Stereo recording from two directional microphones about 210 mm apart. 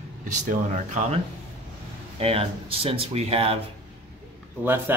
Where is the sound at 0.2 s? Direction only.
35° right (ahead or behind).